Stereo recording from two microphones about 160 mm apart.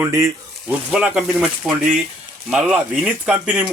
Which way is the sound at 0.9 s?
5° right (ahead or behind).